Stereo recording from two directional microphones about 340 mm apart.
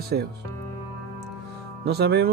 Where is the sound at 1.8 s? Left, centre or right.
Right.